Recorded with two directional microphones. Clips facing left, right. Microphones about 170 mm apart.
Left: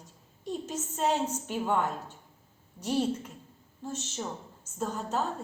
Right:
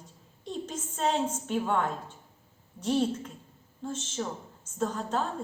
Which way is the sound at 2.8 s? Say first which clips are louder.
Right 2 dB; 10° left (ahead or behind).